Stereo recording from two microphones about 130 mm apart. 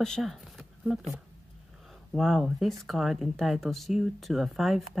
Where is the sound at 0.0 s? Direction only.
5° left (ahead or behind).